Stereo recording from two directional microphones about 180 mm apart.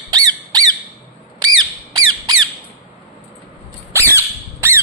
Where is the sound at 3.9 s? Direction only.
15° right (ahead or behind).